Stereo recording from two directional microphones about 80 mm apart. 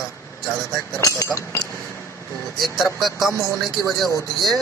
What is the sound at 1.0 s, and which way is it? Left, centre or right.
Speech, left.